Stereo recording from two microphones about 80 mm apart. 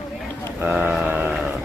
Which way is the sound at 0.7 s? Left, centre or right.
Centre.